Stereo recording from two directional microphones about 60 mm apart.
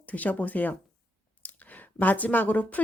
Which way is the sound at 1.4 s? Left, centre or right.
Left.